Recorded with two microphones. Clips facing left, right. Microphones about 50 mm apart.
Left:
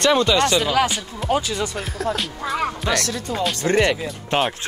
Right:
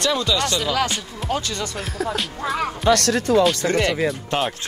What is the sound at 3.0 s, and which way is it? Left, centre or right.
Speech, right.